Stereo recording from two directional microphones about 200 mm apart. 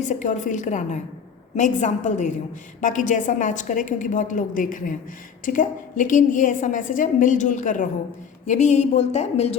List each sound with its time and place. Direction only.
0.0 s a woman's voice: 35° left (ahead or behind)